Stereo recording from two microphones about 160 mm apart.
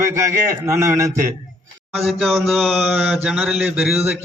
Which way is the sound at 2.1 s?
Centre (ahead or behind).